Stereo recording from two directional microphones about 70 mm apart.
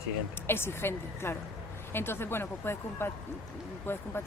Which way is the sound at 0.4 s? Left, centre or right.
Left.